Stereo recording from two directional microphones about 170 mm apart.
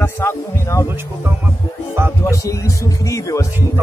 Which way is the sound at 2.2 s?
20° left (ahead or behind).